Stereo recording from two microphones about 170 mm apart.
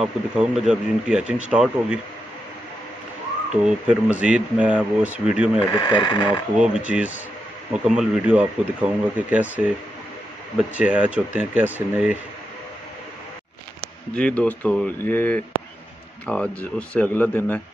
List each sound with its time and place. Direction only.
0.0 s speech: 5° right (ahead or behind)
3.6 s speech: 5° right (ahead or behind)
5.7 s speech: 30° left (ahead or behind)
6.5 s speech: 5° right (ahead or behind)
10.7 s speech: 5° right (ahead or behind)
14.1 s speech: 5° left (ahead or behind)